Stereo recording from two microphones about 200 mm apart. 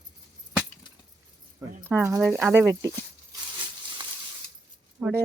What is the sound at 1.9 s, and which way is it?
Speech, 15° right (ahead or behind).